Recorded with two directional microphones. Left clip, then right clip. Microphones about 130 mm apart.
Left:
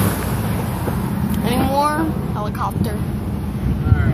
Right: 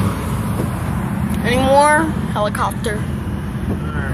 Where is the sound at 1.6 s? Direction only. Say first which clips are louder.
Right 7 dB; 15° right (ahead or behind).